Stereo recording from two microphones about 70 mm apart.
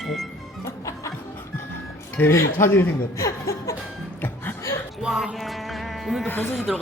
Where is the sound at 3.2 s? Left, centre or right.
Left.